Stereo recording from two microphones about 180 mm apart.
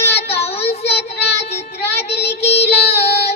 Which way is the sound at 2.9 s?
35° left (ahead or behind).